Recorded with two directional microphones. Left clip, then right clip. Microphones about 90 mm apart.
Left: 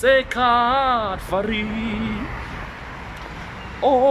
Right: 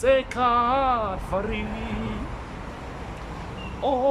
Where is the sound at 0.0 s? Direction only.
15° right (ahead or behind).